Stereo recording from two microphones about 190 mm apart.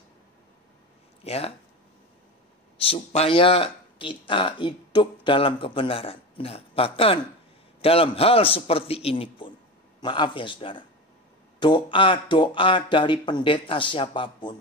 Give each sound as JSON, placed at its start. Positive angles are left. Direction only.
{"t": 1.2, "sound": "speech", "side_deg": 30}
{"t": 2.8, "sound": "speech", "side_deg": 30}